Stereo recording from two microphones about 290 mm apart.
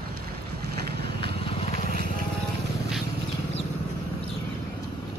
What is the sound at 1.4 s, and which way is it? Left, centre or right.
Vehicle, centre.